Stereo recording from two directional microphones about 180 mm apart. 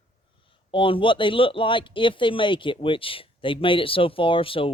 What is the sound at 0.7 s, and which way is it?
Speech, 30° left (ahead or behind).